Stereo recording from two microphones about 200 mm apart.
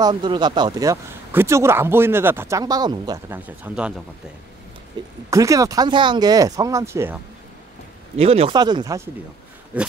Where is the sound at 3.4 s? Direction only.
5° right (ahead or behind).